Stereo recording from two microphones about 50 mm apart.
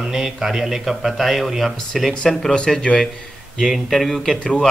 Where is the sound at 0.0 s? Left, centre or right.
Centre.